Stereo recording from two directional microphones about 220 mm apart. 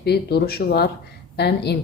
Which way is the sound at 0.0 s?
45° left (ahead or behind).